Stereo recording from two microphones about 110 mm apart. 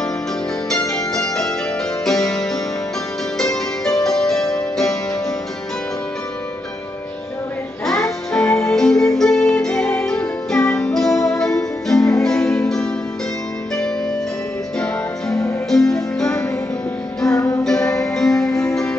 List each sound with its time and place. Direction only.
0.7 s music: 5° left (ahead or behind)
7.8 s music: 5° left (ahead or behind)
14.8 s music: 5° left (ahead or behind)
17.4 s music: 35° left (ahead or behind)
17.6 s music: 5° left (ahead or behind)